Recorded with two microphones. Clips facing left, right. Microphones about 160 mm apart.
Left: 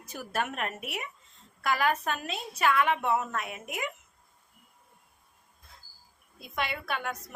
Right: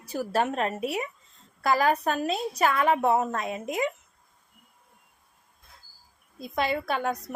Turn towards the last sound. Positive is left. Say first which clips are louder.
# right 6 dB
turn(degrees=-35)  # may be behind; listen again after turning